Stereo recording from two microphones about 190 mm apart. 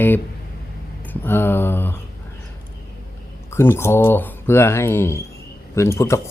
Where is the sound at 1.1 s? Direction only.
10° left (ahead or behind).